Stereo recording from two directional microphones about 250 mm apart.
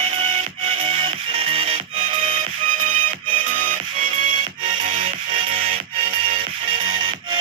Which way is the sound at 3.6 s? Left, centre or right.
Right.